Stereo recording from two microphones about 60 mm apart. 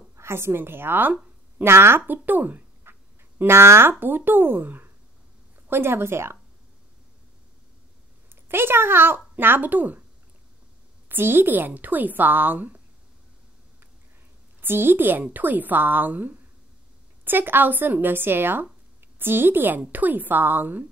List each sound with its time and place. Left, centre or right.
0.1 s a woman's voice: right
2.8 s a sound: right
4.0 s a woman's voice: right
8.5 s a woman's voice: right
11.1 s a woman's voice: right
14.6 s a woman's voice: right